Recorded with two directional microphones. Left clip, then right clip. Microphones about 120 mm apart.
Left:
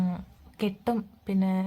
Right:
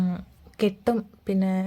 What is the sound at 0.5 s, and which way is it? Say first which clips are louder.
A woman's voice: right 5 dB; 30° right (ahead or behind).